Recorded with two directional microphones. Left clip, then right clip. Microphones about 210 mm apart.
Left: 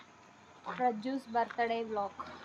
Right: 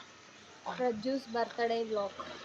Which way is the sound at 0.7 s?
20° left (ahead or behind).